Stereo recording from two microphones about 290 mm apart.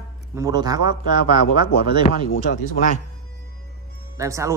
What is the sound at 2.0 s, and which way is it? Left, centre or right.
Speech, left.